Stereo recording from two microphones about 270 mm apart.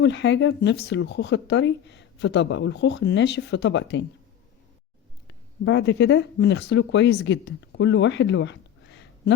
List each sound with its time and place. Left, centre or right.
0.0 s speech: left
5.6 s speech: left